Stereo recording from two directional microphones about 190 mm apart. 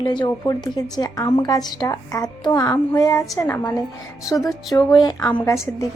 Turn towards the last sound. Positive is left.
turn(degrees=15)  # may be behind; listen again after turning